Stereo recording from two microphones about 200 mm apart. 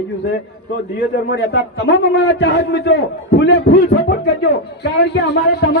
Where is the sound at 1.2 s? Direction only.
65° left (ahead or behind).